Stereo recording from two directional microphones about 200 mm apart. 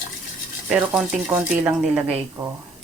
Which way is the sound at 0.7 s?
5° right (ahead or behind).